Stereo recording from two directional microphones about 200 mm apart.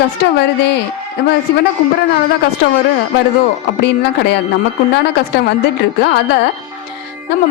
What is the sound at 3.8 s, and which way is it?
Speech, 60° left (ahead or behind).